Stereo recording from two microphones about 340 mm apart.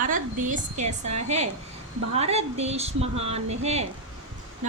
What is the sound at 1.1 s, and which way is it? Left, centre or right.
Speech, right.